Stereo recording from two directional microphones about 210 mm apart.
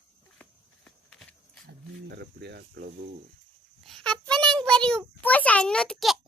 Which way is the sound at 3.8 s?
Centre (ahead or behind).